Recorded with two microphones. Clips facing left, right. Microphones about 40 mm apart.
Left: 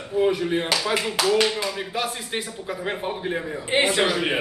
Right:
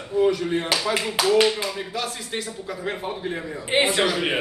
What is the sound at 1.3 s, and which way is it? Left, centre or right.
Speech, centre.